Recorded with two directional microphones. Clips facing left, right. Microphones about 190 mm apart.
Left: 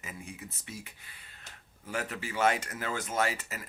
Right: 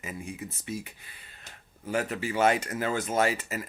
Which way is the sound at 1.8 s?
20° right (ahead or behind).